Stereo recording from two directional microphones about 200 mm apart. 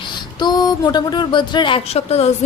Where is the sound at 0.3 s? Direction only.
20° left (ahead or behind).